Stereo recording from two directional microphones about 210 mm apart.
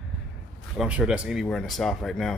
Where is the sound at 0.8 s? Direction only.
5° right (ahead or behind).